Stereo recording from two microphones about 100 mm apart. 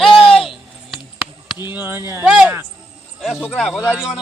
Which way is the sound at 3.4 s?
15° left (ahead or behind).